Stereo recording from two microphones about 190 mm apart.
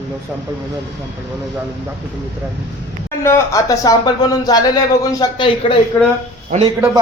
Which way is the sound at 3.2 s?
15° left (ahead or behind).